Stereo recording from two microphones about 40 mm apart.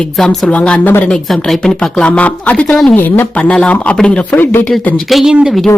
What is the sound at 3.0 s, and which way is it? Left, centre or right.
Speech, left.